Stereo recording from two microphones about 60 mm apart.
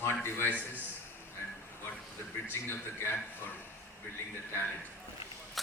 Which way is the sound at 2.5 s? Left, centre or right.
Left.